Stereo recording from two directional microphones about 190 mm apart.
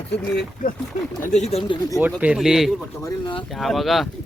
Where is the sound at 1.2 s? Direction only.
35° left (ahead or behind).